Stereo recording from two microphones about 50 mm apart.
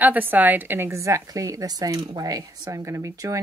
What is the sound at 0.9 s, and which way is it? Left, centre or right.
Speech, right.